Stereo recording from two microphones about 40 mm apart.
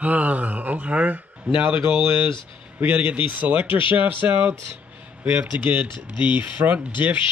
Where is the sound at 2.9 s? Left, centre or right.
Right.